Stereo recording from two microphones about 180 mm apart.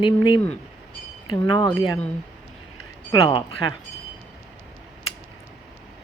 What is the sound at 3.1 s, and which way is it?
Speech, 25° left (ahead or behind).